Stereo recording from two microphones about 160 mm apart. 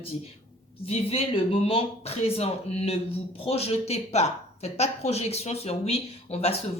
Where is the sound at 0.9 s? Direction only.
40° left (ahead or behind).